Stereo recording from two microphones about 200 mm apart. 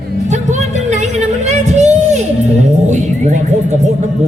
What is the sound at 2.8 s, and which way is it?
Speech, 35° right (ahead or behind).